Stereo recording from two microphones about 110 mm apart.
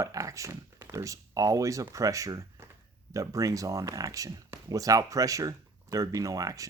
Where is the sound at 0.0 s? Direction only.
30° right (ahead or behind).